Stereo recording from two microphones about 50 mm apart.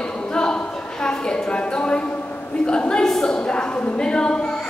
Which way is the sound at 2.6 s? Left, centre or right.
Centre.